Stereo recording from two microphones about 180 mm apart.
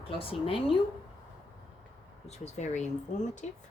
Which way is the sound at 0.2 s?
30° left (ahead or behind).